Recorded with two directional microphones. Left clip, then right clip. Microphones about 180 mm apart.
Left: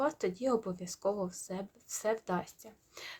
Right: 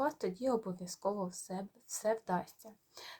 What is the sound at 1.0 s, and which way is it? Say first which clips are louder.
Speech: left 3 dB; 30° left (ahead or behind).